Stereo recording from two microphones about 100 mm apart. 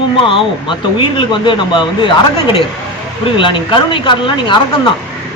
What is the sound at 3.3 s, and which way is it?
A man's voice, 55° left (ahead or behind).